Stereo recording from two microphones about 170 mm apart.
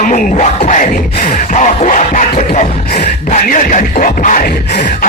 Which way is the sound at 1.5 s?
45° left (ahead or behind).